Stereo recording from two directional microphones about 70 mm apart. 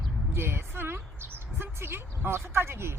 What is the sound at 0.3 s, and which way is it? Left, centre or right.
Speech, right.